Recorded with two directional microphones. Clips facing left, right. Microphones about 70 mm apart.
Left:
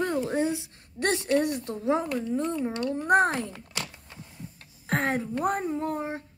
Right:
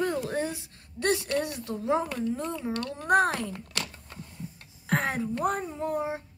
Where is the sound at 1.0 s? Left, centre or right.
Left.